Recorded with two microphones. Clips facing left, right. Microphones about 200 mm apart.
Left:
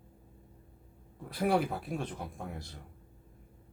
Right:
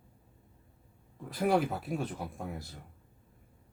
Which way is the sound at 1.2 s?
Centre (ahead or behind).